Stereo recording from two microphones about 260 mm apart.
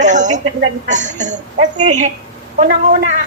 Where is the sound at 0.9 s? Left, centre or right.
Right.